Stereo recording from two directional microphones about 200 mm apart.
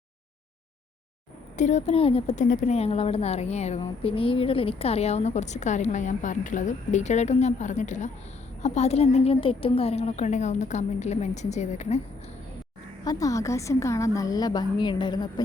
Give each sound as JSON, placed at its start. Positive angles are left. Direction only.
{"t": 1.5, "sound": "a woman's voice", "side_deg": 35}
{"t": 13.1, "sound": "a woman's voice", "side_deg": 15}